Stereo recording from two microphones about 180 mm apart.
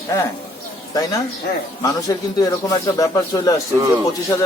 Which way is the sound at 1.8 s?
20° left (ahead or behind).